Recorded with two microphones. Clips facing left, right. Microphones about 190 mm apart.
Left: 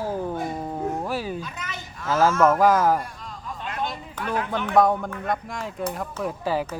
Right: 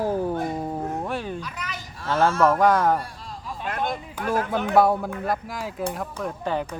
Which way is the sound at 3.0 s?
35° right (ahead or behind).